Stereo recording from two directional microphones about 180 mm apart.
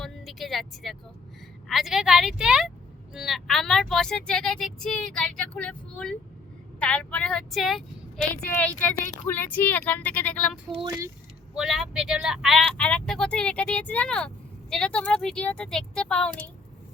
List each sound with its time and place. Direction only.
0.0 s speech: centre (ahead or behind)
10.8 s speech: 20° right (ahead or behind)
11.5 s speech: centre (ahead or behind)